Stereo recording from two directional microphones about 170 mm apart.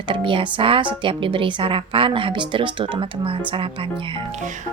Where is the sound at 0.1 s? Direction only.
30° right (ahead or behind).